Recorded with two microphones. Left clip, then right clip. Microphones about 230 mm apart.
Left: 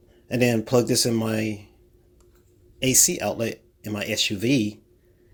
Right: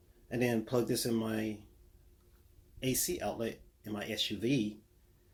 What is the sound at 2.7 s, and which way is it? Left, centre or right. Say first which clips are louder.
Speech: left 14 dB; left.